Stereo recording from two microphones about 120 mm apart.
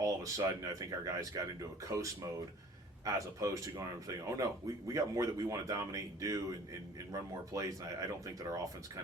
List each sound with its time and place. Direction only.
0.0 s speech: 30° right (ahead or behind)
3.0 s speech: 25° right (ahead or behind)